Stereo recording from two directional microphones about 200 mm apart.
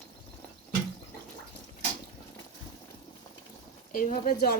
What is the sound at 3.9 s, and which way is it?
Speech, 40° left (ahead or behind).